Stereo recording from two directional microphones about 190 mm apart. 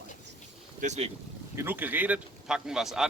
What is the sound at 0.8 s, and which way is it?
Speech, 35° right (ahead or behind).